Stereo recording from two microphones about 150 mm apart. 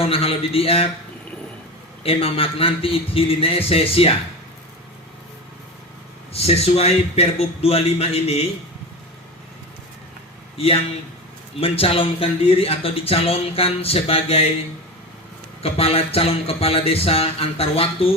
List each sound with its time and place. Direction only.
0.0 s speech: 40° left (ahead or behind)
2.0 s speech: 40° left (ahead or behind)
6.3 s a man's voice: 45° left (ahead or behind)
10.6 s speech: 40° left (ahead or behind)
15.6 s speech: 40° left (ahead or behind)